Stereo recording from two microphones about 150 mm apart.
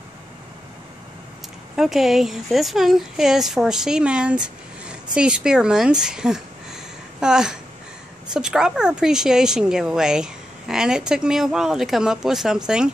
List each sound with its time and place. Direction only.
1.8 s a woman's voice: centre (ahead or behind)